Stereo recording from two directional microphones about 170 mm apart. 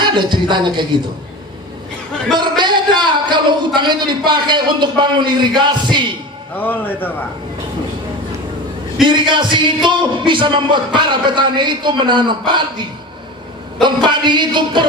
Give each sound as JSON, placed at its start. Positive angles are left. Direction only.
{"t": 0.0, "sound": "a man's voice", "side_deg": -25}
{"t": 2.3, "sound": "a man's voice", "side_deg": -25}
{"t": 6.5, "sound": "a man's voice", "side_deg": 10}
{"t": 9.3, "sound": "a man's voice", "side_deg": -25}
{"t": 13.8, "sound": "a man's voice", "side_deg": -25}